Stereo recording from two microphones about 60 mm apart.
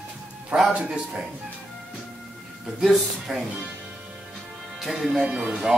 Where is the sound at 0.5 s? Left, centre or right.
Centre.